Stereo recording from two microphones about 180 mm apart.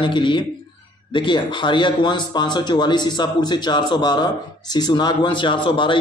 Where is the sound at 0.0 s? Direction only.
25° left (ahead or behind).